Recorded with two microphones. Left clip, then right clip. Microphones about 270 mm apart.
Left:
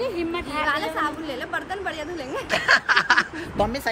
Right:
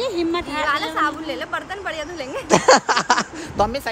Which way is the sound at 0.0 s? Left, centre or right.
Right.